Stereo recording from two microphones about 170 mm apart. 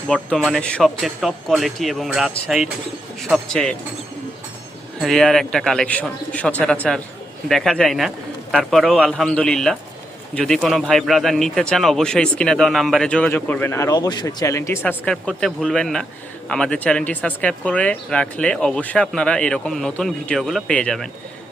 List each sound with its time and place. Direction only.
0.1 s a man's voice: centre (ahead or behind)
4.9 s a man's voice: centre (ahead or behind)